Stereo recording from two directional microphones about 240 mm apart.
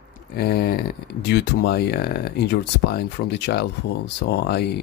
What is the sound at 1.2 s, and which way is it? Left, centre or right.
Speech, left.